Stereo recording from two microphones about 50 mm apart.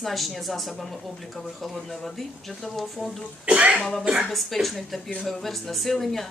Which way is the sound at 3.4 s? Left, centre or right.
Right.